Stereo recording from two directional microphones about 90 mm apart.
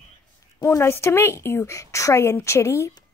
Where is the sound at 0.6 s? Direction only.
30° left (ahead or behind).